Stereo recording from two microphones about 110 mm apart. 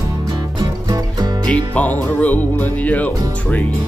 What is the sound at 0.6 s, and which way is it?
Music, 40° right (ahead or behind).